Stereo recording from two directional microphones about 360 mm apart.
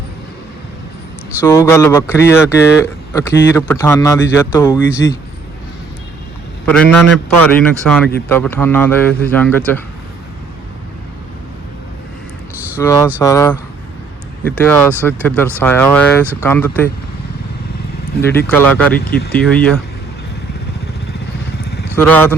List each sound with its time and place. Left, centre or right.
1.4 s speech: centre
6.7 s a man's voice: centre
12.8 s speech: centre
14.6 s a man's voice: centre
18.2 s a man's voice: centre
19.0 s speech: left
19.3 s a man's voice: centre
21.8 s speech: centre